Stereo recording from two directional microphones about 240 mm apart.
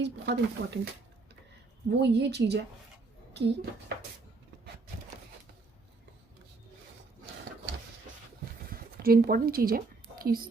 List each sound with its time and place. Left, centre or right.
0.0 s speech: right
1.9 s speech: right
8.7 s a woman's voice: right